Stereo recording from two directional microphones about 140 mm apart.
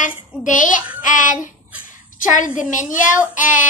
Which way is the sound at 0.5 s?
65° left (ahead or behind).